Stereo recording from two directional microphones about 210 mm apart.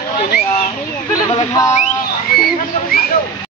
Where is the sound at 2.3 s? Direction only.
45° left (ahead or behind).